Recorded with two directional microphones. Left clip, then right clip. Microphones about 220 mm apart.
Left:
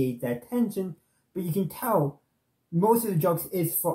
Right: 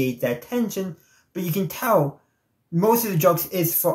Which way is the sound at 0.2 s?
10° right (ahead or behind).